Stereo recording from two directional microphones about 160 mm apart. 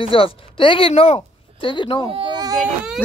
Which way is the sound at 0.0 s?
35° left (ahead or behind).